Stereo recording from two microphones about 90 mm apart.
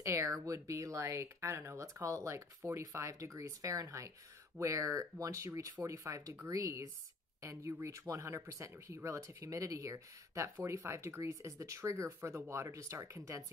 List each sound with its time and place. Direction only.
0.0 s speech: 35° right (ahead or behind)
7.9 s speech: 35° right (ahead or behind)